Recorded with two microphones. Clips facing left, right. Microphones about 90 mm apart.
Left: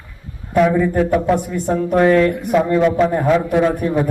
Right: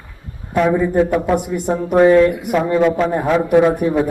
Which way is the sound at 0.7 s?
15° right (ahead or behind).